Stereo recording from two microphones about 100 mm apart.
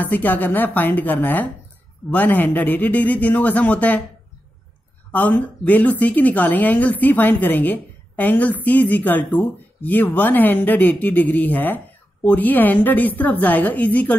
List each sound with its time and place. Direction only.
0.0 s a woman's voice: 15° left (ahead or behind)
5.1 s a woman's voice: 15° left (ahead or behind)